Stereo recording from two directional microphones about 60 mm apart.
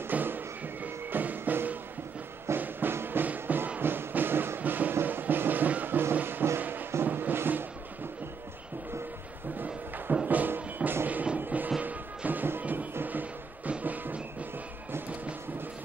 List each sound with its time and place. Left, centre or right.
0.1 s music: right
10.2 s music: right